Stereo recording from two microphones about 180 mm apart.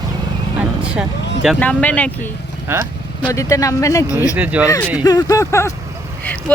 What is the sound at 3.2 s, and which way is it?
Speech, 20° left (ahead or behind).